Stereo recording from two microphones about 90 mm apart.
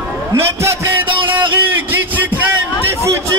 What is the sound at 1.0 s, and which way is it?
Music, 70° right (ahead or behind).